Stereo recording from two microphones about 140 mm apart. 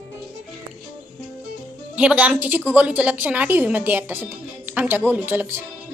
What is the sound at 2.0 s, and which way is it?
A woman's voice, 10° right (ahead or behind).